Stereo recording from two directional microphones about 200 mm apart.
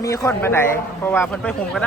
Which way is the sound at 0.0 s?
15° left (ahead or behind).